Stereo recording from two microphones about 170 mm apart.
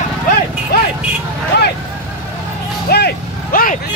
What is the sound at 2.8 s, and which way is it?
Vehicle, 70° left (ahead or behind).